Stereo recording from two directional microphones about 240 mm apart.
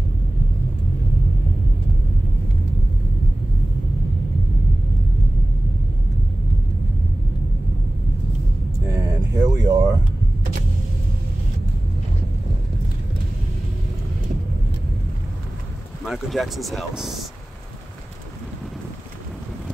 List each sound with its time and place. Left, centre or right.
8.8 s vehicle: centre
16.1 s speech: centre